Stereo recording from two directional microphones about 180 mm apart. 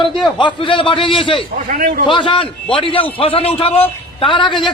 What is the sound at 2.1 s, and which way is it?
A man's voice, 25° left (ahead or behind).